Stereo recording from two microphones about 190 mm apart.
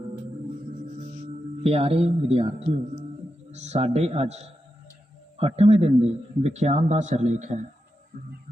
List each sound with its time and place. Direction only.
1.6 s a man's voice: 30° right (ahead or behind)